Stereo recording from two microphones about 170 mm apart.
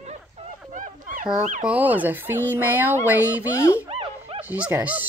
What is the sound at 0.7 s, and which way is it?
Dog, 45° right (ahead or behind).